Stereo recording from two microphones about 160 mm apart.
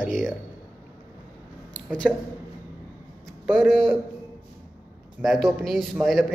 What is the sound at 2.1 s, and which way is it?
Speech, 5° right (ahead or behind).